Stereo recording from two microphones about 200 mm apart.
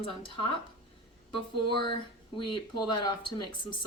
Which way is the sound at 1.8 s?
25° left (ahead or behind).